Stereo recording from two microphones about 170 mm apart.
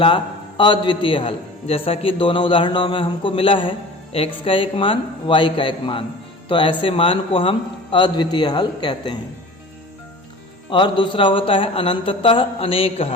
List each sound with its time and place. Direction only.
0.0 s a man's voice: 30° left (ahead or behind)
10.7 s a man's voice: 30° left (ahead or behind)